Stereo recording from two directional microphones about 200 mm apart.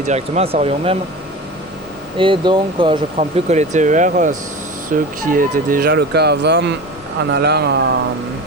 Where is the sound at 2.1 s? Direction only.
25° right (ahead or behind); by 7.8 s 55° right (ahead or behind).